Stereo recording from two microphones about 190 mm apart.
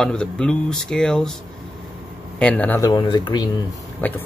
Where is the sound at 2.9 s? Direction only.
25° left (ahead or behind).